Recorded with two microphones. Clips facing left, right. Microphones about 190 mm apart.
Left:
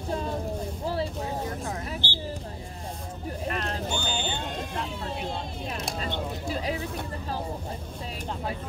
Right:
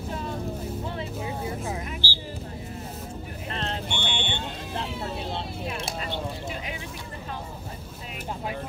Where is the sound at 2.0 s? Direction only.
20° left (ahead or behind).